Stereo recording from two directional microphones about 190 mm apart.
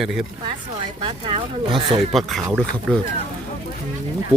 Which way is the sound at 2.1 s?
Centre (ahead or behind).